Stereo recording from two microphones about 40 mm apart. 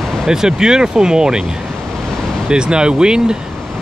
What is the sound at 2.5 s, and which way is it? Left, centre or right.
Speech, right.